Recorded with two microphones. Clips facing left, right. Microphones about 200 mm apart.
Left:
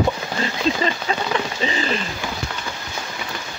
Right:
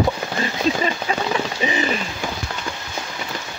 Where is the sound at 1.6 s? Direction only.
15° right (ahead or behind).